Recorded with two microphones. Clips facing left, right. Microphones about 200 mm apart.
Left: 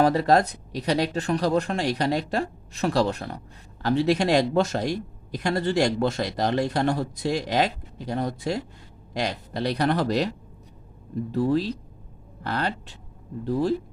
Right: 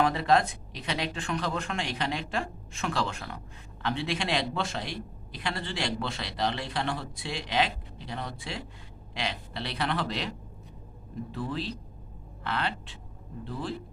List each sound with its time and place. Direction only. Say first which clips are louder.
0.0 s a man's voice: left 5 dB; 40° left (ahead or behind)